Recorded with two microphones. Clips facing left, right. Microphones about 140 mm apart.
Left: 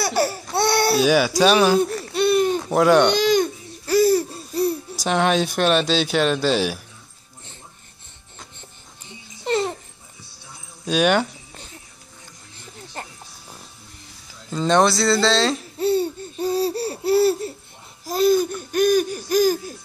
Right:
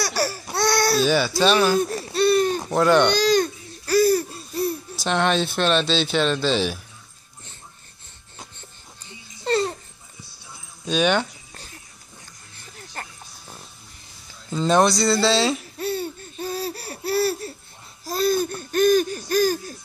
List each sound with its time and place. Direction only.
0.0 s laughter: 25° left (ahead or behind)
0.6 s baby cry: 25° left (ahead or behind)
0.9 s speech: 10° left (ahead or behind)
2.1 s a sound: 15° left (ahead or behind)
2.7 s speech: 5° left (ahead or behind)
3.2 s babbling: 20° left (ahead or behind)
5.0 s speech: 5° left (ahead or behind)
9.4 s babbling: 20° left (ahead or behind)
10.9 s speech: 5° left (ahead or behind)
12.7 s music: 20° left (ahead or behind)
14.5 s speech: centre (ahead or behind)
15.8 s laughter: 25° left (ahead or behind)